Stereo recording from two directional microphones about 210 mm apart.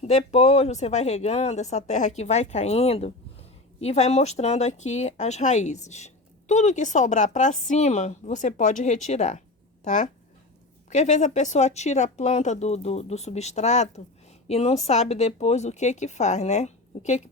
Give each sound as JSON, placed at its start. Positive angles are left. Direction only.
{"t": 0.0, "sound": "speech", "side_deg": 30}